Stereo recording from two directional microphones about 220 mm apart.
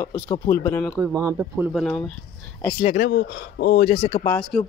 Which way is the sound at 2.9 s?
50° left (ahead or behind).